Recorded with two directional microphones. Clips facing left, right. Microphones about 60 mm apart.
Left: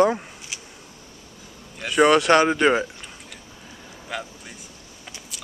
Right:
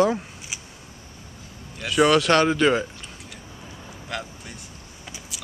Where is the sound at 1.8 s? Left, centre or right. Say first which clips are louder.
Left 2 dB; centre.